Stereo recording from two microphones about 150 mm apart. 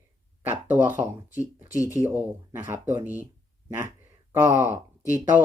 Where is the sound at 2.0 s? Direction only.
20° right (ahead or behind).